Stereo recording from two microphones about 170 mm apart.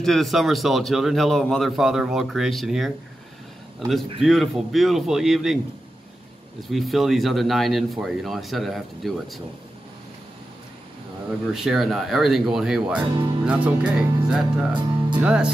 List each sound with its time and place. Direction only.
0.0 s a man's voice: centre (ahead or behind)
4.2 s a man's voice: centre (ahead or behind)
6.7 s a man's voice: centre (ahead or behind)
11.5 s a man's voice: centre (ahead or behind)
13.0 s speech: 25° right (ahead or behind)
13.4 s speech: 5° right (ahead or behind)